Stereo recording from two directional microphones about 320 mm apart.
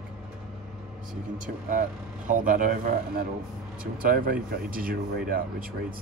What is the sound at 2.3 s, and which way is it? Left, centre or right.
Speech, right.